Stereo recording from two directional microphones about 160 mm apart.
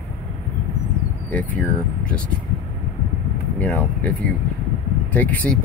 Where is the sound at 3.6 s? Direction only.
10° left (ahead or behind).